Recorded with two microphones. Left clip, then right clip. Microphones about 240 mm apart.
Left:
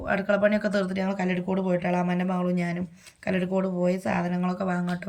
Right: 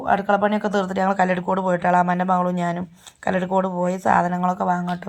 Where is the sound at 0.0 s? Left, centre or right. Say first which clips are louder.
Right 5 dB; centre.